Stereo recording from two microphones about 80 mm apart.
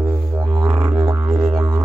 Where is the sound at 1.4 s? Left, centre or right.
Right.